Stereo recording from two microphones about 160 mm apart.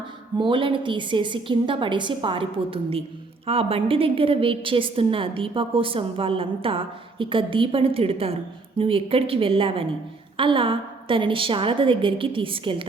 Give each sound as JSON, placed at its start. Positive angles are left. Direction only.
{"t": 0.3, "sound": "a woman's voice", "side_deg": -30}